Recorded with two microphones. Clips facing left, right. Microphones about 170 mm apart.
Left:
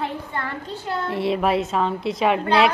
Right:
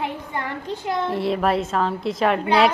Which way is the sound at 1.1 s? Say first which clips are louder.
Left 2 dB; centre (ahead or behind).